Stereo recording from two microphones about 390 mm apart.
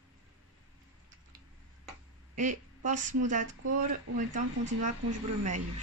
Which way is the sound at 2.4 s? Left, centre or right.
Centre.